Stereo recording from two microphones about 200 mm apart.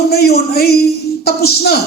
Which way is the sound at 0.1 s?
50° left (ahead or behind).